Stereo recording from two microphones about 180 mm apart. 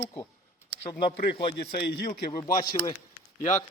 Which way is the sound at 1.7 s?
60° left (ahead or behind).